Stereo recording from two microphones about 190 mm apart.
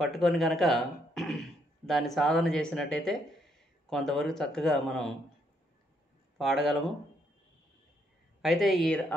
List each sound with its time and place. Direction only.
0.0 s speech: centre (ahead or behind)
6.3 s speech: centre (ahead or behind)
8.4 s speech: centre (ahead or behind)